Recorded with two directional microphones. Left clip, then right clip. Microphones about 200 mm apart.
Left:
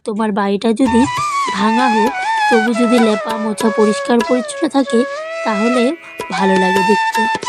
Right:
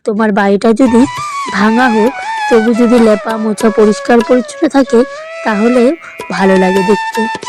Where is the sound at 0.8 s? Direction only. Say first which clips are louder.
Right 4 dB; centre (ahead or behind).